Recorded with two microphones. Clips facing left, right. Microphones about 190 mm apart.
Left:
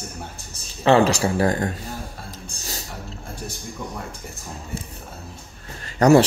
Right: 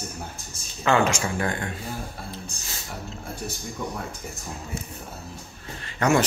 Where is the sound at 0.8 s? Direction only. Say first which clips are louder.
Left 5 dB; 35° left (ahead or behind).